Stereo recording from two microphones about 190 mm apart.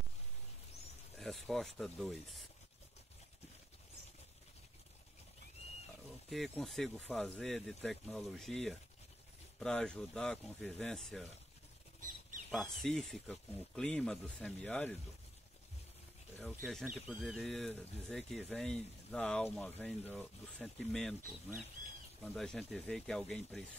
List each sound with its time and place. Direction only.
1.1 s speech: centre (ahead or behind)
5.6 s wild animals: 35° left (ahead or behind)
6.3 s speech: centre (ahead or behind)
12.4 s speech: centre (ahead or behind)
16.3 s speech: centre (ahead or behind)
22.2 s speech: 5° left (ahead or behind)